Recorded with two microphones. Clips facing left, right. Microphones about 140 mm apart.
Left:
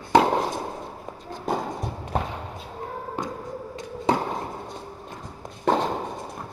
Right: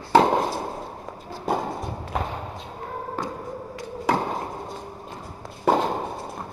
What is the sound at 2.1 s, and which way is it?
Basketball bounce, 35° left (ahead or behind).